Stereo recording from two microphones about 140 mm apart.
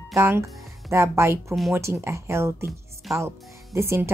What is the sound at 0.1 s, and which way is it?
A woman's voice, 20° right (ahead or behind).